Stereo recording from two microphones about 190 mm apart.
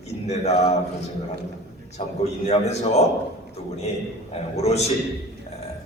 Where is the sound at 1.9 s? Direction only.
35° left (ahead or behind).